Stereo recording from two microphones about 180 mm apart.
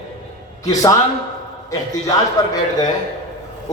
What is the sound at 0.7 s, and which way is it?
A man's voice, 20° left (ahead or behind).